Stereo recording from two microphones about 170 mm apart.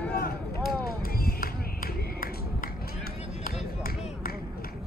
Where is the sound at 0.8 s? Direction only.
60° left (ahead or behind).